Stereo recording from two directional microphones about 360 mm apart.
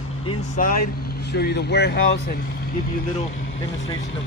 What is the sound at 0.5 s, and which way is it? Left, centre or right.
Speech, left.